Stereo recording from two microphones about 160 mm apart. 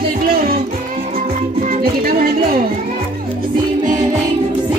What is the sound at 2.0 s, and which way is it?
Speech, 65° right (ahead or behind).